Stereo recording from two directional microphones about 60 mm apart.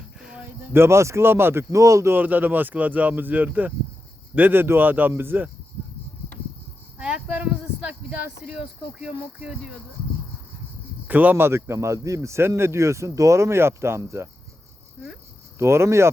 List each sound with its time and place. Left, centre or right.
0.2 s a sound: centre
0.4 s a man's voice: right
1.7 s speech: right
2.1 s speech: right
7.0 s a sound: centre
8.4 s speech: centre
11.1 s speech: right
11.4 s speech: right
15.5 s speech: right